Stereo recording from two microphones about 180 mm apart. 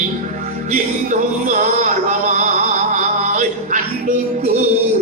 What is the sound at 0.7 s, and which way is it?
Music, 45° right (ahead or behind).